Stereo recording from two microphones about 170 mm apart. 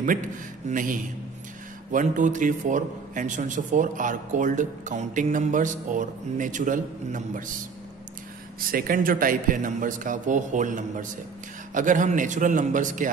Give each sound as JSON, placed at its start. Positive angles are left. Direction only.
{"t": 0.7, "sound": "speech", "side_deg": -50}
{"t": 8.5, "sound": "speech", "side_deg": -60}